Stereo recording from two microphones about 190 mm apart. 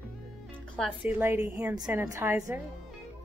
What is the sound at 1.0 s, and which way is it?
A woman's voice, 10° right (ahead or behind).